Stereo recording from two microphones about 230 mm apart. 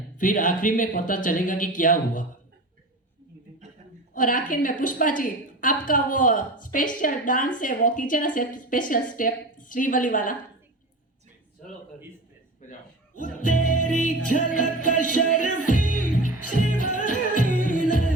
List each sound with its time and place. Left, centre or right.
0.2 s a woman's voice: left
4.1 s a woman's voice: left
12.6 s a sound: left
13.1 s music: left
13.8 s a woman's voice: left
15.0 s music: left